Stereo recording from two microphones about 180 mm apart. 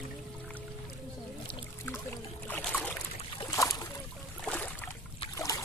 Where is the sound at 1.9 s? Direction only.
10° left (ahead or behind).